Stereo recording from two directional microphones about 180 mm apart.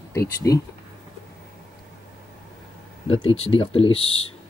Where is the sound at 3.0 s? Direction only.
30° left (ahead or behind).